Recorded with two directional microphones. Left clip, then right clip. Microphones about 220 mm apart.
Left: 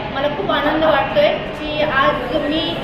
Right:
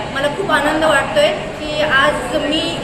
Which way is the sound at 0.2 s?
15° right (ahead or behind).